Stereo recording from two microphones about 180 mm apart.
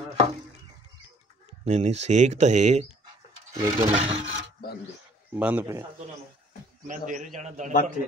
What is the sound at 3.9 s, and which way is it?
Speech, 35° right (ahead or behind).